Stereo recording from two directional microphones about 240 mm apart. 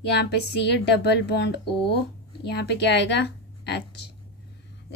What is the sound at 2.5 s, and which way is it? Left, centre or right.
Speech, left.